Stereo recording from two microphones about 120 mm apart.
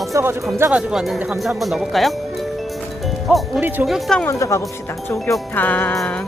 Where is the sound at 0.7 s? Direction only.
5° right (ahead or behind).